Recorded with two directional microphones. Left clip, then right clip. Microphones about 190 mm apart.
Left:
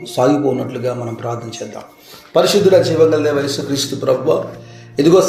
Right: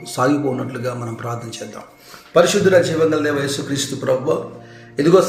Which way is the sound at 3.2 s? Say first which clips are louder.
Left 3 dB; 90° left.